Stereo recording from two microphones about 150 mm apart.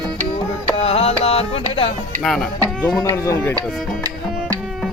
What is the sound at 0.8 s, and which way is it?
Music, 40° left (ahead or behind).